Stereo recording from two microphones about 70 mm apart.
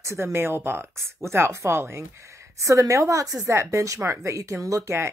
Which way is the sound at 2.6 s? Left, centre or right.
Right.